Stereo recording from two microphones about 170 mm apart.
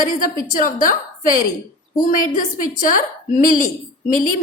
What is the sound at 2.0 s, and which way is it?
A woman's voice, 50° left (ahead or behind).